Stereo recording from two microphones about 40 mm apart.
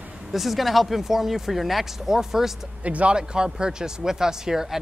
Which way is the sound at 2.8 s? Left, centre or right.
Right.